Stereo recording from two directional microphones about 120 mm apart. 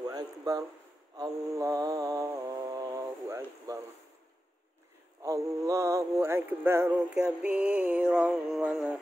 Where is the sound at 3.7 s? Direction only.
30° right (ahead or behind).